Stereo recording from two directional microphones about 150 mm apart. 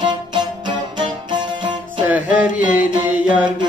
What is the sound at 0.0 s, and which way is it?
Music, 30° right (ahead or behind).